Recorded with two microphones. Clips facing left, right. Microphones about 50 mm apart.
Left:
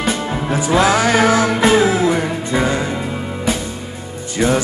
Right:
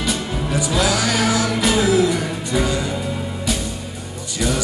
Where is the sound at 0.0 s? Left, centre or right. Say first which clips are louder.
Left 4 dB; left.